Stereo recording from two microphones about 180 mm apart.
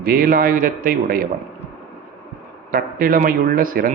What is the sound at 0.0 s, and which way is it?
A man's voice, 55° right (ahead or behind).